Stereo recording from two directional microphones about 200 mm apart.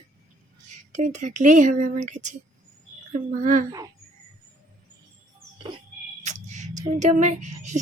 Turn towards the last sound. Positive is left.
turn(degrees=-40)  # may be behind; listen again after turning